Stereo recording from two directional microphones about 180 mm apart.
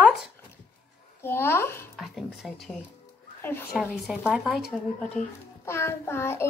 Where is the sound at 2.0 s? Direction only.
Centre (ahead or behind).